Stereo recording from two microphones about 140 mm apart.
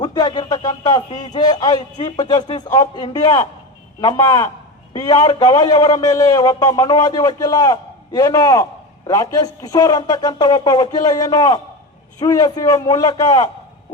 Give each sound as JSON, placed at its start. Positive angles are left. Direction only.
{"t": 0.0, "sound": "a man's voice", "side_deg": 30}